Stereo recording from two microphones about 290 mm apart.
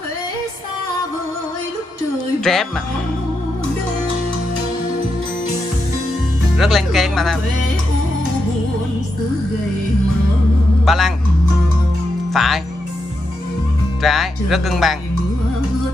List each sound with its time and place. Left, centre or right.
2.5 s speech: centre
6.6 s speech: centre
10.9 s speech: centre
12.3 s speech: centre
14.0 s speech: centre